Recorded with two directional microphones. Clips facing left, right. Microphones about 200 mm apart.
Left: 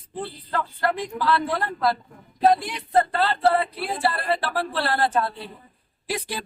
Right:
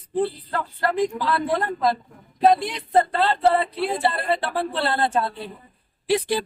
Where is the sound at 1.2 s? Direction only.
20° right (ahead or behind).